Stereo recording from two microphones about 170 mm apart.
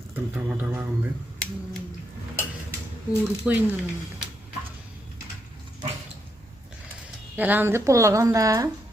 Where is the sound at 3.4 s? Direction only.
10° right (ahead or behind).